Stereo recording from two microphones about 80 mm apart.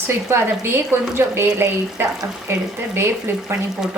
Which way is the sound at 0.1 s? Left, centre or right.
Right.